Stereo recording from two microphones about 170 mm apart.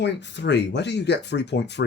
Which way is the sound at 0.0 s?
90° left.